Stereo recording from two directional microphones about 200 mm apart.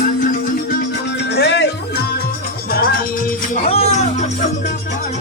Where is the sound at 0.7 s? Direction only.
50° left (ahead or behind).